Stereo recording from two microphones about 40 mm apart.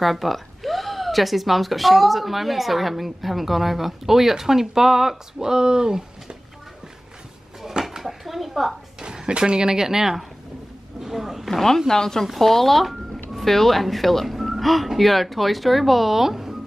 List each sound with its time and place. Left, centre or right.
0.0 s speech: centre
7.6 s dishes: centre
9.0 s speech: right
11.0 s a sound: centre
11.9 s speech: centre